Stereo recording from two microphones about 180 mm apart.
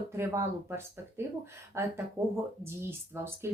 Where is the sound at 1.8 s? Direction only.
15° right (ahead or behind).